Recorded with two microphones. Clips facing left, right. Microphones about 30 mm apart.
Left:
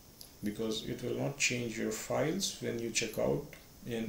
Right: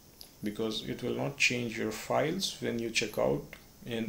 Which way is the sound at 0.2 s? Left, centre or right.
Right.